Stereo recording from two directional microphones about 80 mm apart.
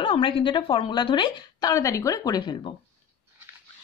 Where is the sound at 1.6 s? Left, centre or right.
Left.